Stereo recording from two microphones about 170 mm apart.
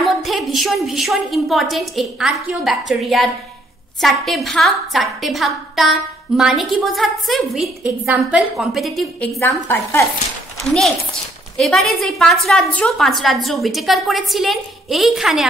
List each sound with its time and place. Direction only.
0.0 s a woman's voice: centre (ahead or behind)
9.4 s a woman's voice: 15° left (ahead or behind)
11.5 s a woman's voice: centre (ahead or behind)